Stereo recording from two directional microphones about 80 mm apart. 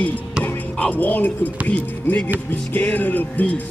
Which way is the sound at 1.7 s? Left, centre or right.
Left.